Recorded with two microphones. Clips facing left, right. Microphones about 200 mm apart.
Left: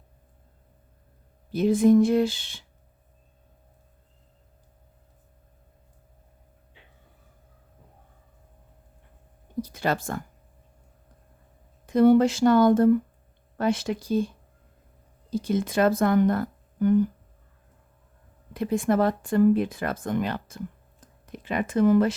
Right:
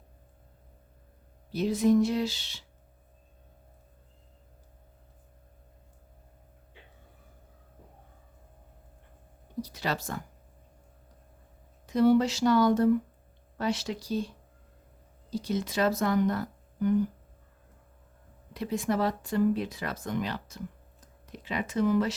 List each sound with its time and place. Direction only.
1.5 s speech: 50° left (ahead or behind)
9.6 s speech: 50° left (ahead or behind)
11.9 s speech: 55° left (ahead or behind)
18.5 s speech: 50° left (ahead or behind)